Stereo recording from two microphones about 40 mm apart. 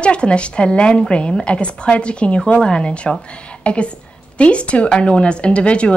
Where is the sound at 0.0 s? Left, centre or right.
Left.